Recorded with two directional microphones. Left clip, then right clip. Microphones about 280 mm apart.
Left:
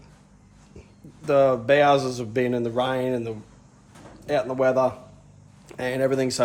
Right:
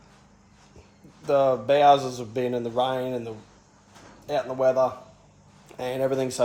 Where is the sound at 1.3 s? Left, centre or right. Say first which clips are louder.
Left 2 dB; centre.